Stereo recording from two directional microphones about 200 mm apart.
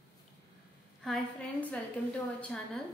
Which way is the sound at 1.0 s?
5° left (ahead or behind).